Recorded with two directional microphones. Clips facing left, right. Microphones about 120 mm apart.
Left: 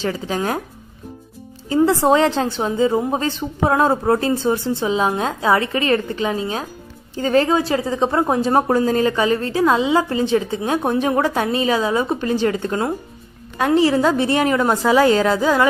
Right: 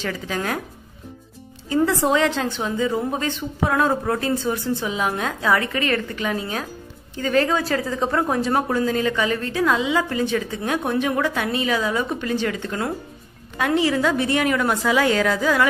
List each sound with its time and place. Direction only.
0.0 s a woman's voice: 30° left (ahead or behind)
1.9 s a woman's voice: 30° left (ahead or behind)